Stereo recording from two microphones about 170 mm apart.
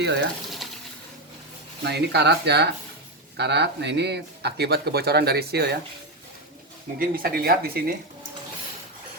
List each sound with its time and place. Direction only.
0.0 s speech: 90° right
1.8 s speech: 80° right
3.3 s speech: 90° right; by 5.7 s 70° right (ahead or behind)
7.0 s speech: 60° right (ahead or behind)